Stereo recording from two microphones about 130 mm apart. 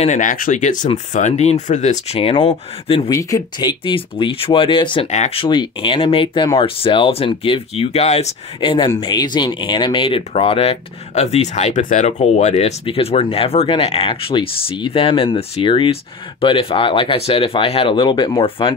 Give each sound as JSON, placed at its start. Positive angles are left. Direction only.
{"t": 0.0, "sound": "speech", "side_deg": 75}
{"t": 0.8, "sound": "speech", "side_deg": 65}
{"t": 3.1, "sound": "speech", "side_deg": 25}
{"t": 5.0, "sound": "speech", "side_deg": 60}
{"t": 5.4, "sound": "speech", "side_deg": 40}
{"t": 8.5, "sound": "speech", "side_deg": 40}
{"t": 12.8, "sound": "speech", "side_deg": 45}